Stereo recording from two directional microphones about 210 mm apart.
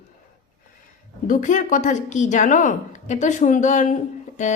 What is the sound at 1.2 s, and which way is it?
A woman's voice, 40° left (ahead or behind).